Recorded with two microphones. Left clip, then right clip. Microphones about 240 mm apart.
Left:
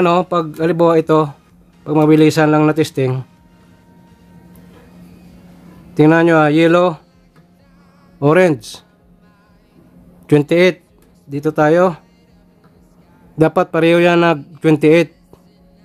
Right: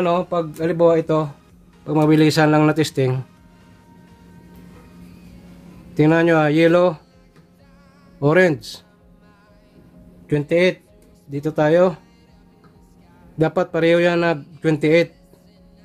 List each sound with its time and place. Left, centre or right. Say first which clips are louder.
0.0 s speech: left 5 dB; left
1.9 s speech: left 5 dB; centre
5.9 s a man's voice: left 5 dB; left
8.2 s a man's voice: left 4 dB; left
10.2 s speech: left 6 dB; left
11.2 s a man's voice: left 5 dB; left
13.4 s a man's voice: left 5 dB; left